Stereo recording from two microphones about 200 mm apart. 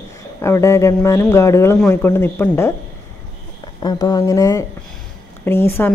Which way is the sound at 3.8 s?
20° left (ahead or behind).